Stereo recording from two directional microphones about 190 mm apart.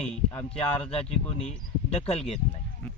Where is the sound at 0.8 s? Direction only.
30° left (ahead or behind).